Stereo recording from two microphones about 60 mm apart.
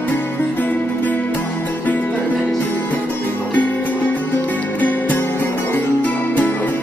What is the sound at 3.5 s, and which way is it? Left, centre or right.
Music, left.